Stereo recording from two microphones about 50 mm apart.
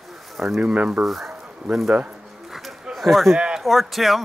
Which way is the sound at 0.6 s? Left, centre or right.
Right.